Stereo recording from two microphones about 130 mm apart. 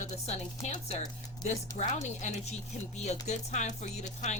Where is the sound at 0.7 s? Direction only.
70° left (ahead or behind).